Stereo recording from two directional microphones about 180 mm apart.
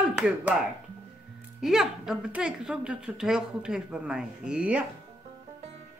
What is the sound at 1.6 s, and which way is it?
Speech, centre (ahead or behind).